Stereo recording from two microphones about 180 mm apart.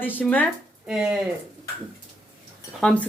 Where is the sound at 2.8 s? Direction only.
5° left (ahead or behind).